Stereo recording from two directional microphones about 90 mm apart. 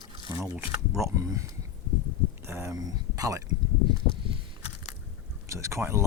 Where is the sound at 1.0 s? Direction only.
35° right (ahead or behind).